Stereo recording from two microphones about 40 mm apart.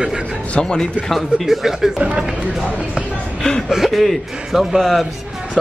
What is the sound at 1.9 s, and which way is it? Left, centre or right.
Speech, right.